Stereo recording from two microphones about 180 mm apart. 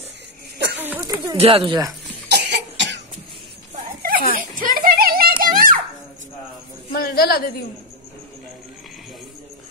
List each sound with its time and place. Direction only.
0.7 s a sound: 10° right (ahead or behind)
1.3 s speech: 30° right (ahead or behind)
2.2 s cough: 70° right (ahead or behind)
3.7 s a sound: 50° right (ahead or behind)
5.4 s children playing: 50° right (ahead or behind)
6.9 s a woman's voice: 55° left (ahead or behind)